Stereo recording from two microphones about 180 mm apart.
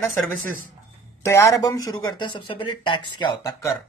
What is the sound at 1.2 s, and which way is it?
Speech, 15° left (ahead or behind).